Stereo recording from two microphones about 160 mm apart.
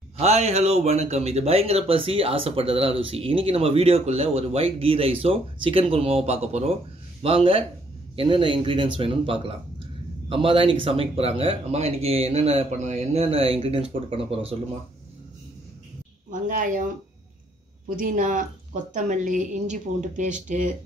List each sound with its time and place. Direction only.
0.2 s speech: 45° right (ahead or behind)
16.3 s speech: 55° right (ahead or behind)